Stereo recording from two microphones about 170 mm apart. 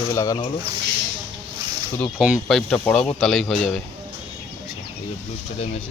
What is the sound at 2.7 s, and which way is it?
Speech, 5° left (ahead or behind).